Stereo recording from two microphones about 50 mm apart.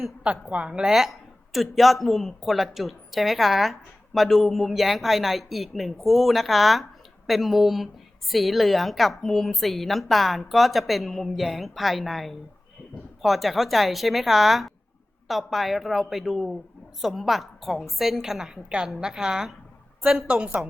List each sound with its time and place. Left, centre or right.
0.2 s a woman's voice: right